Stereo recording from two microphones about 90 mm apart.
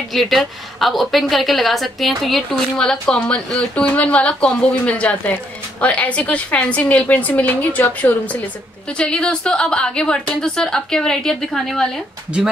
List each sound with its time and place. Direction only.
0.1 s a woman's voice: centre (ahead or behind)